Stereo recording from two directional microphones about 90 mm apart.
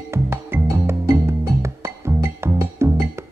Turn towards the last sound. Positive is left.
turn(degrees=-30)  # may be behind; listen again after turning